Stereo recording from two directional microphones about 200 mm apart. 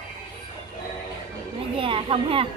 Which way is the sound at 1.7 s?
25° right (ahead or behind).